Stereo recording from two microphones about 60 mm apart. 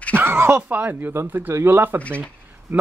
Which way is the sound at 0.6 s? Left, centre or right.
Right.